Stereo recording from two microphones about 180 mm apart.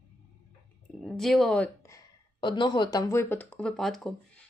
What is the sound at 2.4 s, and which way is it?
Speech, 25° left (ahead or behind).